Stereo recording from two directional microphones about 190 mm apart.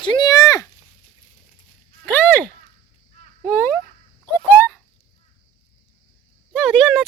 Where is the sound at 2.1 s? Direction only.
10° left (ahead or behind).